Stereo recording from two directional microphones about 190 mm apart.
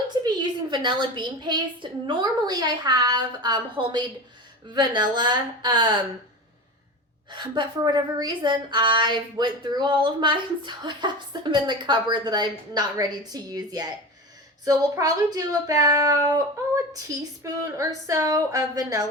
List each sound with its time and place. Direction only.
0.1 s a sound: 20° right (ahead or behind)
0.7 s a woman's voice: 25° right (ahead or behind)
7.3 s a woman's voice: 25° right (ahead or behind)